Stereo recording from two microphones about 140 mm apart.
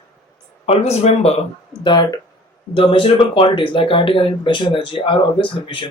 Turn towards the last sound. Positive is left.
turn(degrees=35)  # may be behind; listen again after turning